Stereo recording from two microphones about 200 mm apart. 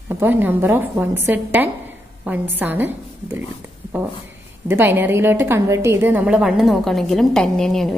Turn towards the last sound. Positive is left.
turn(degrees=0)  # may be behind; listen again after turning